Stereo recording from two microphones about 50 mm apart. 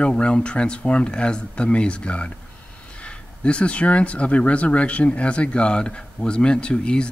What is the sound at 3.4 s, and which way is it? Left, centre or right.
Speech, left.